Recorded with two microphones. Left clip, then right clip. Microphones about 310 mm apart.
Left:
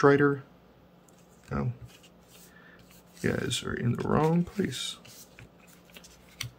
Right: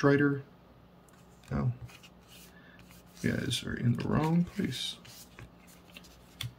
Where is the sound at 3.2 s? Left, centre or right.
Centre.